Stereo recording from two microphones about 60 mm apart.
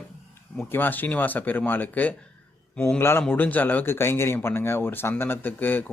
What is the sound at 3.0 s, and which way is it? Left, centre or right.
Speech, left.